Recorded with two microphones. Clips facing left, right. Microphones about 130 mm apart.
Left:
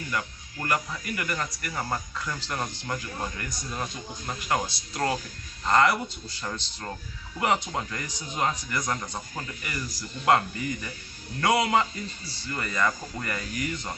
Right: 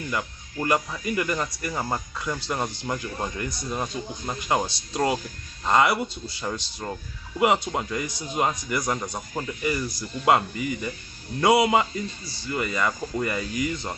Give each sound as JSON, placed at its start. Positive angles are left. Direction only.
{"t": 0.1, "sound": "speech", "side_deg": -20}